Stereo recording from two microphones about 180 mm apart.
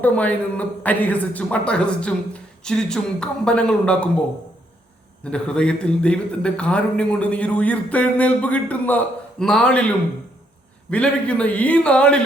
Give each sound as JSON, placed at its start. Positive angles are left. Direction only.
{"t": 0.0, "sound": "a man's voice", "side_deg": 10}
{"t": 5.2, "sound": "a man's voice", "side_deg": 5}
{"t": 10.9, "sound": "a man's voice", "side_deg": 5}